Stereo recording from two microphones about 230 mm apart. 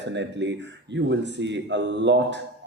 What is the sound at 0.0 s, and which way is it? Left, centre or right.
Speech, right.